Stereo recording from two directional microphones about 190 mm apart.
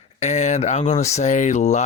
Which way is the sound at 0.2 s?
35° left (ahead or behind).